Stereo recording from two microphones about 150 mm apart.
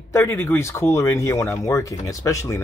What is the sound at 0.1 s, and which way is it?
Speech, 15° left (ahead or behind).